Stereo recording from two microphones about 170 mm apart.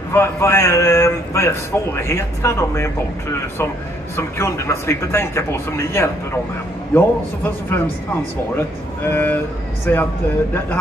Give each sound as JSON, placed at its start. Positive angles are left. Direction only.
{"t": 0.1, "sound": "a man's voice", "side_deg": 15}
{"t": 9.0, "sound": "a man's voice", "side_deg": 10}